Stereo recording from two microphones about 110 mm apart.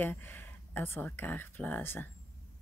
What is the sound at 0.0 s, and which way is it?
Speech, 20° left (ahead or behind).